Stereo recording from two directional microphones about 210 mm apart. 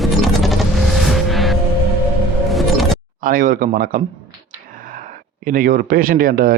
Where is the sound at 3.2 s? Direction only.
40° right (ahead or behind).